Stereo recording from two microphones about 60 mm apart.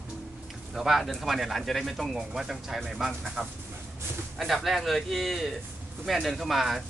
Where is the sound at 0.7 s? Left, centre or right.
Centre.